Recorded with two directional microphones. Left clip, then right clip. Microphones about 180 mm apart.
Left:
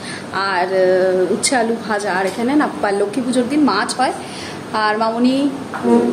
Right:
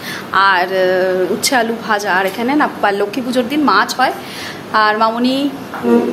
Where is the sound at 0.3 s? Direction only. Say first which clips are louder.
Right 6 dB; centre (ahead or behind).